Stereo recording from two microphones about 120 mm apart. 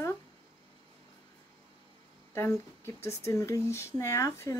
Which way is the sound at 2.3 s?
20° left (ahead or behind).